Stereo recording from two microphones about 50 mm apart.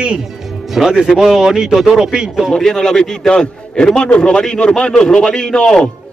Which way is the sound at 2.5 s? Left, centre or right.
Centre.